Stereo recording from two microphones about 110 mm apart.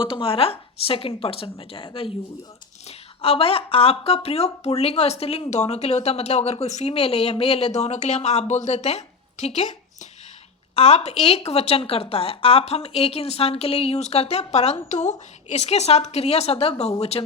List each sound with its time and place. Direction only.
0.0 s a woman's voice: 55° left (ahead or behind)
7.8 s a woman's voice: 85° left
10.8 s speech: 70° left (ahead or behind); by 15.1 s 90° left
15.5 s speech: 80° left